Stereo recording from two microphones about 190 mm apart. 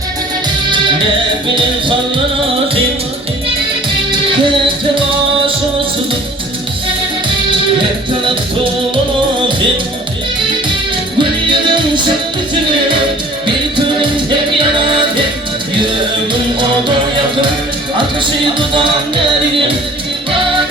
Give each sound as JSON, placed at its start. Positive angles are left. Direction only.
{"t": 11.2, "sound": "music", "side_deg": -25}
{"t": 14.6, "sound": "music", "side_deg": -25}